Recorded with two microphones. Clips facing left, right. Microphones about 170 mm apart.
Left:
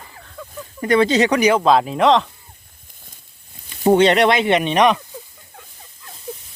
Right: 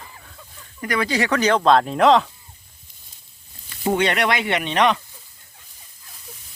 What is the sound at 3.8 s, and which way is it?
Speech, 30° left (ahead or behind).